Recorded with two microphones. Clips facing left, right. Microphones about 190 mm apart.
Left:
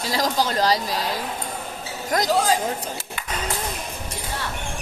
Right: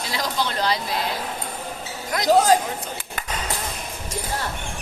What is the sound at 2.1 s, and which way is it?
Speech, 40° left (ahead or behind).